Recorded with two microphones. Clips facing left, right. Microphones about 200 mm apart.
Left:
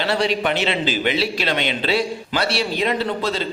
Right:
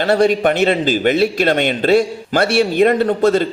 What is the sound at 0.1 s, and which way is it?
A man's voice, 50° right (ahead or behind).